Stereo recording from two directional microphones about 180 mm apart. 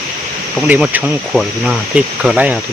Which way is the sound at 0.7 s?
10° right (ahead or behind).